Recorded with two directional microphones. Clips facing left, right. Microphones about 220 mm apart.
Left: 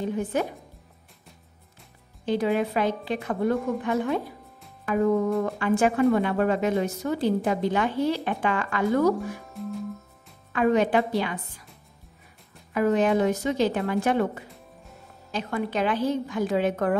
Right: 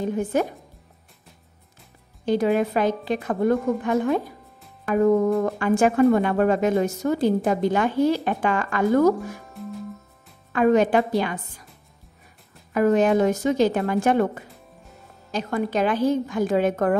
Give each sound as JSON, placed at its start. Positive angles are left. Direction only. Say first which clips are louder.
{"t": 0.0, "sound": "speech", "louder": "right 3 dB", "side_deg": -45}
{"t": 2.2, "sound": "speech", "louder": "right 3 dB", "side_deg": -45}
{"t": 9.4, "sound": "music", "louder": "left 1 dB", "side_deg": 0}
{"t": 10.5, "sound": "speech", "louder": "right 3 dB", "side_deg": -45}
{"t": 12.7, "sound": "speech", "louder": "right 3 dB", "side_deg": -45}